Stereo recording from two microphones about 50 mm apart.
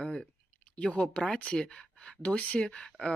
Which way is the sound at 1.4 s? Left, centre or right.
Centre.